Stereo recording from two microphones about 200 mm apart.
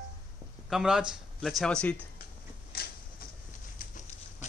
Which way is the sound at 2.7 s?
50° left (ahead or behind).